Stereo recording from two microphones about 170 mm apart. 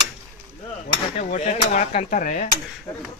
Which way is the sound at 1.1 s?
45° left (ahead or behind).